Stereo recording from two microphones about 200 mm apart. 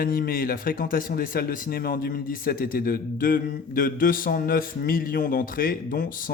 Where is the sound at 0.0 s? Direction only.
45° left (ahead or behind).